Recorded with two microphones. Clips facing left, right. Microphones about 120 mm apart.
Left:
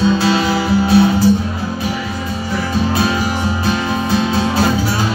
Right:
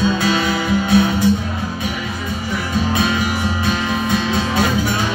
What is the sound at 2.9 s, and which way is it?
Music, 35° left (ahead or behind).